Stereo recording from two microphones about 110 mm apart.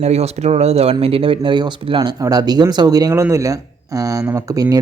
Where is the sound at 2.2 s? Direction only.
35° right (ahead or behind).